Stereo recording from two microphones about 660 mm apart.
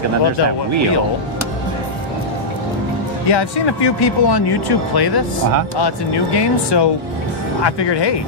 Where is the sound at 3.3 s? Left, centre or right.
Left.